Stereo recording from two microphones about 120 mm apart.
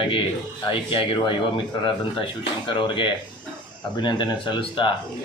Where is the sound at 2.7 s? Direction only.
45° left (ahead or behind).